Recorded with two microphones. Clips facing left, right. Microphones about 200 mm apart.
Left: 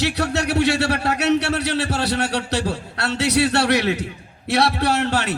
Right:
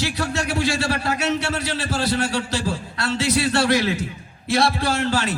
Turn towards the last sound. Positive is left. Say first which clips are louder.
# left 1 dB
turn(degrees=65)  # may be behind; listen again after turning